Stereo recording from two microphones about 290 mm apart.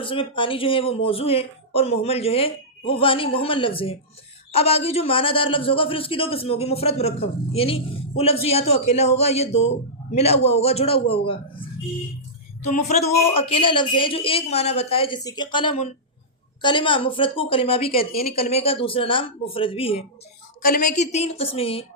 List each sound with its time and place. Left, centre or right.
0.0 s a man's voice: centre
12.6 s a man's voice: left
18.1 s speech: left
18.3 s a man's voice: left